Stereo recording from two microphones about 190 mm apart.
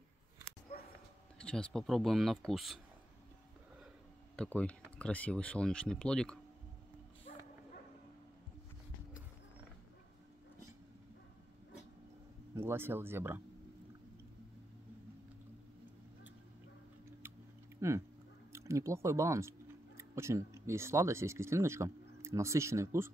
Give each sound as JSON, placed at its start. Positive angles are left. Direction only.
{"t": 1.4, "sound": "speech", "side_deg": 5}
{"t": 4.4, "sound": "speech", "side_deg": 5}
{"t": 12.5, "sound": "speech", "side_deg": -10}
{"t": 17.7, "sound": "a sound", "side_deg": -15}
{"t": 18.5, "sound": "speech", "side_deg": -15}